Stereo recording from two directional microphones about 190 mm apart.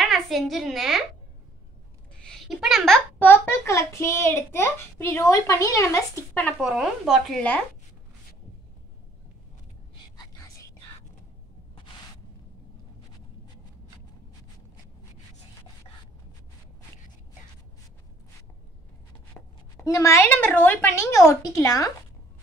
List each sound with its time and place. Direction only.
0.0 s a child's voice: centre (ahead or behind)
2.2 s a child's voice: centre (ahead or behind)
6.6 s speech: centre (ahead or behind)
19.3 s speech: 15° left (ahead or behind)